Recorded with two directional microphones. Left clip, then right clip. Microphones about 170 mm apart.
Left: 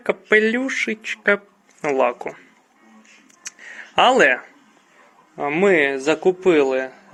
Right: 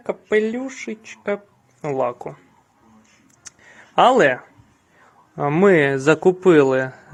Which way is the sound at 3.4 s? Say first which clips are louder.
Left 8 dB; 15° right (ahead or behind).